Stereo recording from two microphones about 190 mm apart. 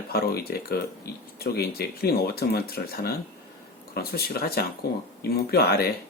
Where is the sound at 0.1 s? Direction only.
55° left (ahead or behind).